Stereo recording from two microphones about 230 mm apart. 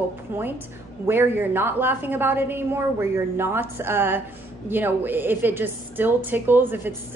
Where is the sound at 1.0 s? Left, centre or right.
Centre.